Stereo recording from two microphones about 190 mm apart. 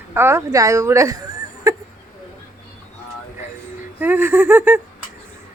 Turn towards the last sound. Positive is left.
turn(degrees=-10)  # may be behind; listen again after turning